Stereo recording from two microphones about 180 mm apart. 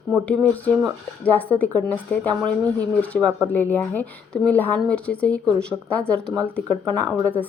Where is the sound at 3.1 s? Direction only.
Centre (ahead or behind).